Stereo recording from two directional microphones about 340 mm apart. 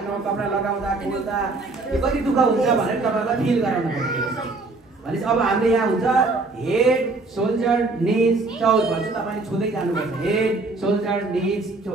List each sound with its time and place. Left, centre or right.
2.0 s a man's voice: centre
5.2 s a man's voice: centre
10.2 s a man's voice: centre